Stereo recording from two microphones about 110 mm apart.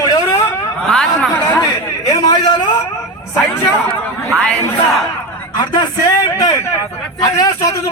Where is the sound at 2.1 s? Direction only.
40° left (ahead or behind).